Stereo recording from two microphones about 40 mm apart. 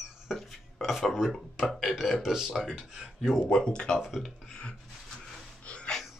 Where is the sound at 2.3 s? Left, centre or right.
Centre.